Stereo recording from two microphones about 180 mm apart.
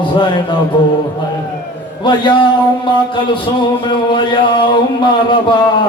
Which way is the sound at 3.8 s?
25° left (ahead or behind).